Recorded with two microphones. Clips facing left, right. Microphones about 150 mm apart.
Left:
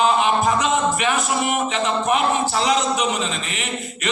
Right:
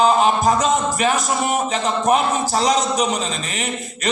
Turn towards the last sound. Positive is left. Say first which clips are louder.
# right 2 dB
turn(degrees=-40)  # may be behind; listen again after turning